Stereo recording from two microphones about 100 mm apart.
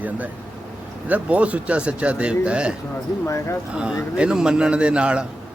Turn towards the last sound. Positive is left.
turn(degrees=-10)  # may be behind; listen again after turning